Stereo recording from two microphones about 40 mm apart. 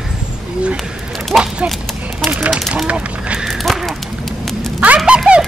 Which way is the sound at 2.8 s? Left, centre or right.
Right.